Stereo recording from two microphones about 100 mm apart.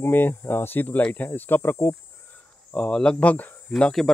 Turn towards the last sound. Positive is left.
turn(degrees=5)  # may be behind; listen again after turning